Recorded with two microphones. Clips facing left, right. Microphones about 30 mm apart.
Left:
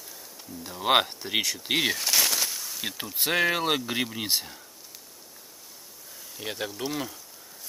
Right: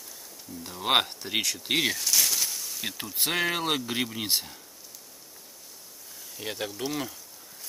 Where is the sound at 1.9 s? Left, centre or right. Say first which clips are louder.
Left 2 dB; left.